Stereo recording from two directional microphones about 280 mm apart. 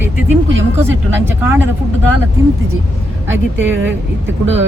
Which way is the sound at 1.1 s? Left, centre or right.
Centre.